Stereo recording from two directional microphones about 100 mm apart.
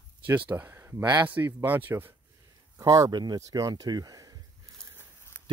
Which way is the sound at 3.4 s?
35° right (ahead or behind).